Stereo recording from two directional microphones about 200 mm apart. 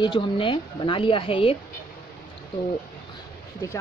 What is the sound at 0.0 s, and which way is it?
Speech, 25° left (ahead or behind).